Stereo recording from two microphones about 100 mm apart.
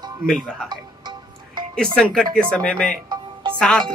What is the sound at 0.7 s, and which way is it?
Music, 45° right (ahead or behind).